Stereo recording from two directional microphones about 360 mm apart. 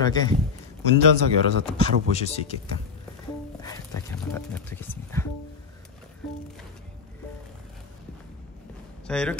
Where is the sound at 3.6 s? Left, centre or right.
Centre.